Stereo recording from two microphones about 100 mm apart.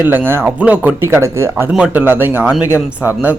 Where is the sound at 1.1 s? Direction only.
25° right (ahead or behind).